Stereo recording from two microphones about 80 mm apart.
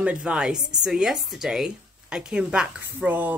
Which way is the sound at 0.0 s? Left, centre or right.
Centre.